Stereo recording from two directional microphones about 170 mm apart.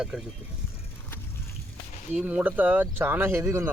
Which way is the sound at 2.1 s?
10° right (ahead or behind).